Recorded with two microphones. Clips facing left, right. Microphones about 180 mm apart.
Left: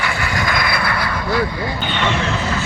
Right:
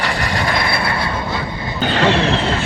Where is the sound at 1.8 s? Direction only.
35° right (ahead or behind).